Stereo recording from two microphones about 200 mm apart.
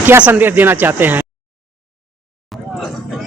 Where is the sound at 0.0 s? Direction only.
10° right (ahead or behind).